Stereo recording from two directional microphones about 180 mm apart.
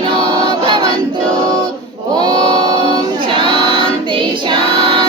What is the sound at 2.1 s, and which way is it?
Music, 25° right (ahead or behind).